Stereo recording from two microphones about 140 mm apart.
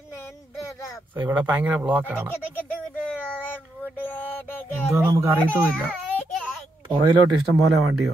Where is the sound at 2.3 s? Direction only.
15° left (ahead or behind).